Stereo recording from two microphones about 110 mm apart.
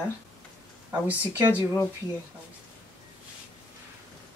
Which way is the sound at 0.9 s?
15° right (ahead or behind).